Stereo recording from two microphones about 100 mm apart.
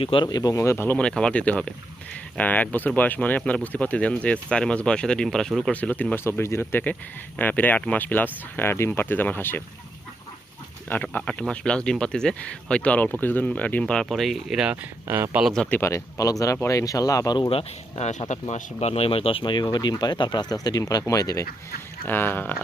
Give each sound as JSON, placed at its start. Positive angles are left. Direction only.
{"t": 0.0, "sound": "speech", "side_deg": 60}
{"t": 0.3, "sound": "speech", "side_deg": 40}
{"t": 0.9, "sound": "speech", "side_deg": 10}
{"t": 5.7, "sound": "speech", "side_deg": 15}
{"t": 6.2, "sound": "speech", "side_deg": 25}
{"t": 10.8, "sound": "speech", "side_deg": 15}
{"t": 15.0, "sound": "speech", "side_deg": -25}
{"t": 15.5, "sound": "speech", "side_deg": 5}
{"t": 15.8, "sound": "speech", "side_deg": 25}
{"t": 17.5, "sound": "speech", "side_deg": 75}
{"t": 22.0, "sound": "speech", "side_deg": 20}